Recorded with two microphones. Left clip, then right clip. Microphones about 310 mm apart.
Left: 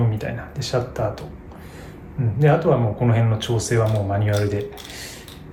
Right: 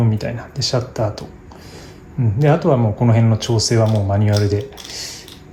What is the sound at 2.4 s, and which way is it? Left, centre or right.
Speech, right.